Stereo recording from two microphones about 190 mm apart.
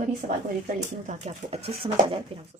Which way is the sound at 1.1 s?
35° right (ahead or behind).